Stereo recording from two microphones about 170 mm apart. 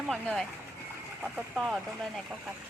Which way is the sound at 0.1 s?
5° left (ahead or behind).